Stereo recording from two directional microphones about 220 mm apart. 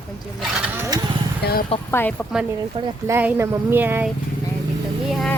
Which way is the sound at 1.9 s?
10° left (ahead or behind).